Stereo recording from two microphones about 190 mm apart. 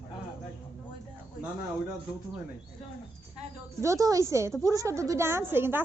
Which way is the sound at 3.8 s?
15° right (ahead or behind).